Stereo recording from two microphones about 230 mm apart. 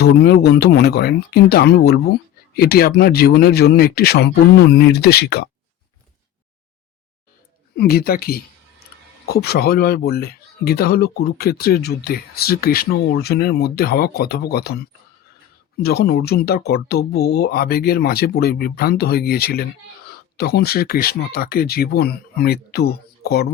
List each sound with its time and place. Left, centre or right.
0.0 s speech: left
7.8 s speech: left